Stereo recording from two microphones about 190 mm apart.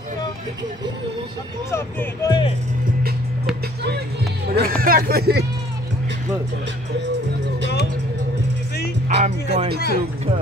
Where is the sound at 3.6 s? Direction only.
60° right (ahead or behind).